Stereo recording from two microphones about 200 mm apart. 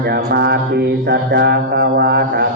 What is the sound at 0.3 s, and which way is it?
Mantra, 55° right (ahead or behind).